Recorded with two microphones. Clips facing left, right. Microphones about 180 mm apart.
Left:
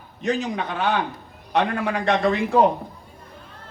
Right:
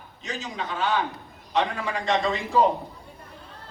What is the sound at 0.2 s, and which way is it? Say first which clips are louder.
A man's voice: left 9 dB; 60° left (ahead or behind).